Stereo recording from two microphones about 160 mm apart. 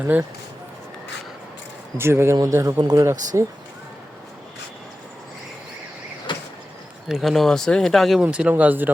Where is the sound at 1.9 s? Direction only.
15° right (ahead or behind).